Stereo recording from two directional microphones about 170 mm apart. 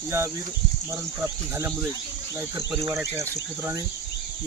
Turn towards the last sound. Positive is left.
turn(degrees=-15)  # may be behind; listen again after turning